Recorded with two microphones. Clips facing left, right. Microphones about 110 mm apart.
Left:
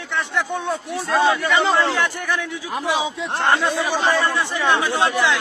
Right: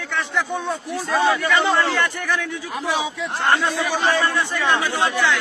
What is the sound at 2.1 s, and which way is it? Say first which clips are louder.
Speech: even; centre (ahead or behind).